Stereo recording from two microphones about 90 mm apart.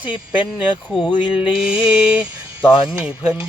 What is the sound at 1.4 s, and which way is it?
Music, 10° right (ahead or behind).